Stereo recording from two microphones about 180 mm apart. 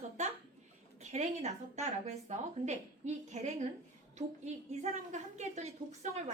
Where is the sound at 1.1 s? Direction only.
40° right (ahead or behind).